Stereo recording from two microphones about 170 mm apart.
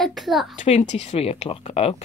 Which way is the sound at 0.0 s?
Centre (ahead or behind).